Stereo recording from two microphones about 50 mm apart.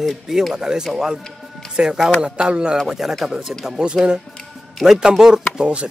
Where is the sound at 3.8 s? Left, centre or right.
Centre.